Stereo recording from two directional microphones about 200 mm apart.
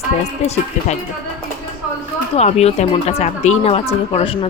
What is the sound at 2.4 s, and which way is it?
Speech, 30° left (ahead or behind).